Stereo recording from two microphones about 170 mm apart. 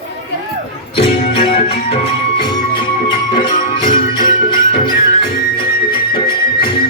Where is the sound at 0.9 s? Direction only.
30° left (ahead or behind).